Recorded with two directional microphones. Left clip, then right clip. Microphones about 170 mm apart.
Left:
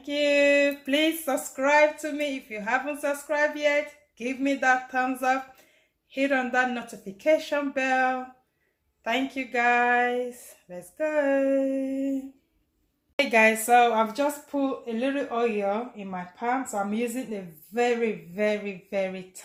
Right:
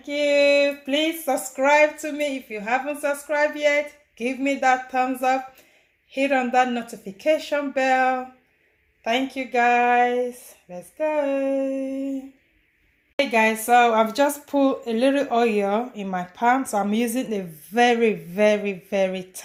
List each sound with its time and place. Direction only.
0.0 s a sound: centre (ahead or behind)
1.5 s a woman's voice: 10° right (ahead or behind)
13.1 s speech: 5° left (ahead or behind)
13.7 s a woman's voice: 15° right (ahead or behind)
13.9 s speech: 35° right (ahead or behind)